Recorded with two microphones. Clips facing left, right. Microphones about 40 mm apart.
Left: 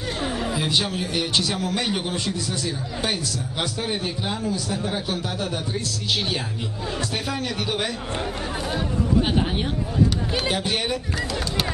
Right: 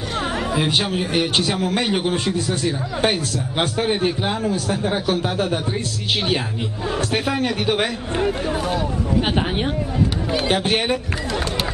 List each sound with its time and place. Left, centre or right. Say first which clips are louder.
0.2 s a man's voice: right 5 dB; right
7.0 s a man's voice: right 7 dB; right
10.5 s speech: right 8 dB; right